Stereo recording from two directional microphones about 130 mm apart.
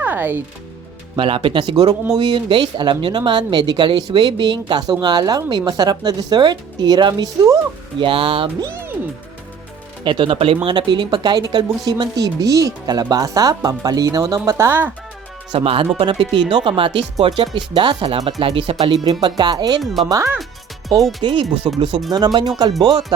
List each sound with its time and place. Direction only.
0.0 s speech: 15° right (ahead or behind)
1.1 s speech: 40° right (ahead or behind)
7.9 s speech: 40° right (ahead or behind)
8.6 s speech: 20° right (ahead or behind)
10.0 s speech: 40° right (ahead or behind); by 14.9 s 15° right (ahead or behind)
15.5 s speech: 45° right (ahead or behind)
19.2 s speech: 35° right (ahead or behind)
19.8 s speech: centre (ahead or behind)
20.1 s speech: 25° right (ahead or behind)
21.2 s speech: 40° right (ahead or behind)